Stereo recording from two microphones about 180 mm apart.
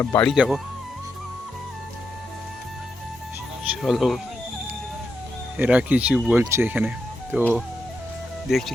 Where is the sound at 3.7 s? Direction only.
Centre (ahead or behind).